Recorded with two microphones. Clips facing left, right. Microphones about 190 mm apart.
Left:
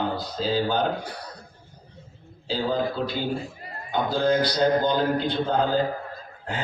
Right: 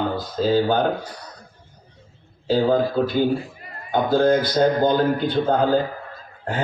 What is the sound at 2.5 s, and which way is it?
A man's voice, 50° right (ahead or behind).